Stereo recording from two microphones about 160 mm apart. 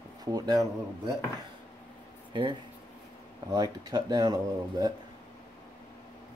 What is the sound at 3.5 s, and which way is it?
Speech, 25° right (ahead or behind).